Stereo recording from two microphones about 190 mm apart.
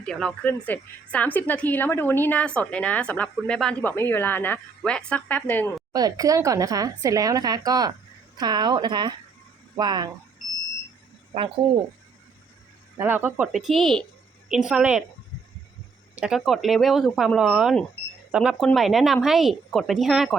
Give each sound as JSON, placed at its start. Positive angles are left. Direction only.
{"t": 0.0, "sound": "a woman's voice", "side_deg": 5}
{"t": 5.9, "sound": "a woman's voice", "side_deg": -20}
{"t": 13.0, "sound": "speech", "side_deg": -10}
{"t": 16.1, "sound": "speech", "side_deg": -5}